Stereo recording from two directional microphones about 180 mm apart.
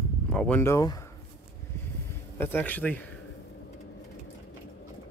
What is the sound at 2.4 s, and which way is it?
Speech, 10° left (ahead or behind).